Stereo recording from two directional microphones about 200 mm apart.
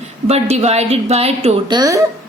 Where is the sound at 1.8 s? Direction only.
15° right (ahead or behind).